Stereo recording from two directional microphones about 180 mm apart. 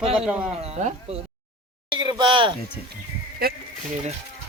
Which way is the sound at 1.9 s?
25° right (ahead or behind).